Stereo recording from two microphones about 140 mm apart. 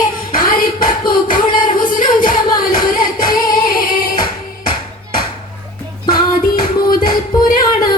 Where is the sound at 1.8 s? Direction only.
80° left.